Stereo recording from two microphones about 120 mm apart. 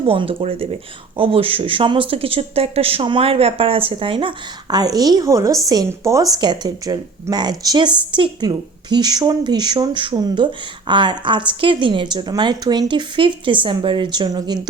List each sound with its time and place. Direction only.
0.1 s a woman's voice: 50° right (ahead or behind); by 6.2 s 25° right (ahead or behind)
6.3 s speech: 35° right (ahead or behind)